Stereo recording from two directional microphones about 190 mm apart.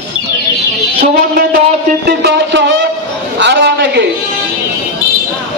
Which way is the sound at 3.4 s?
65° right (ahead or behind).